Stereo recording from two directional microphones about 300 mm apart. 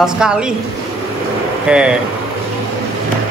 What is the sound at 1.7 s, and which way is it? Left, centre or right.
Speech, centre.